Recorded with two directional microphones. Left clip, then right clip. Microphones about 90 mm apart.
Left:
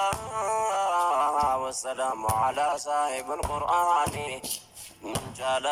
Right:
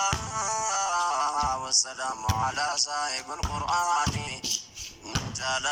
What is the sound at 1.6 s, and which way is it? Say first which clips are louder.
Speech: right 1 dB; 45° left (ahead or behind).